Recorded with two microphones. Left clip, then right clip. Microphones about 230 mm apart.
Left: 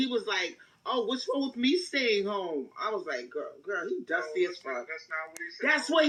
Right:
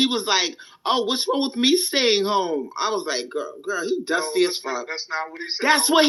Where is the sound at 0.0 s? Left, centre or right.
Right.